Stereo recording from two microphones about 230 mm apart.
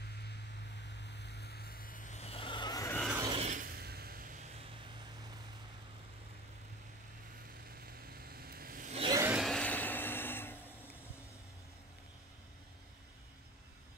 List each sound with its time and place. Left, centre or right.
0.8 s vehicle: left; by 3.0 s centre
3.2 s mechanisms: centre
3.4 s vehicle: right
7.8 s vehicle: right
8.9 s a sound: right
9.2 s vehicle: centre